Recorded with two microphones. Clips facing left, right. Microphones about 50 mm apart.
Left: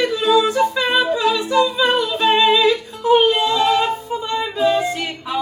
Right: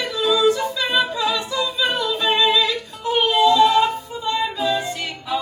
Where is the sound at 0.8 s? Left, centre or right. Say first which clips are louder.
Left 4 dB; centre.